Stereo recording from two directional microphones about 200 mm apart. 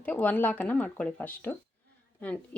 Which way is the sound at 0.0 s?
10° left (ahead or behind).